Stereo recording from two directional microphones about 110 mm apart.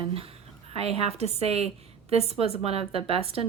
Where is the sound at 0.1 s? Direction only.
60° right (ahead or behind).